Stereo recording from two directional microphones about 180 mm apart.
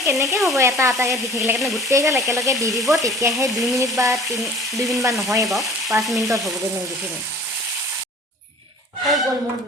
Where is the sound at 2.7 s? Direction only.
Centre (ahead or behind).